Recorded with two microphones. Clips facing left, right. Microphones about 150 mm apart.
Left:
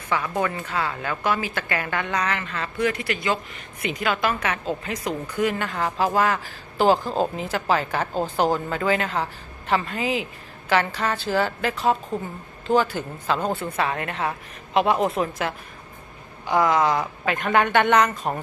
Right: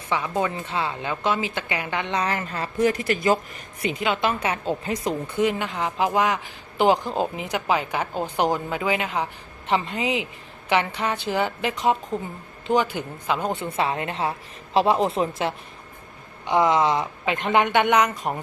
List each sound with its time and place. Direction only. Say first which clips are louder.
0.1 s a woman's voice: even; 20° right (ahead or behind)
13.7 s a woman's voice: right 1 dB; 25° right (ahead or behind)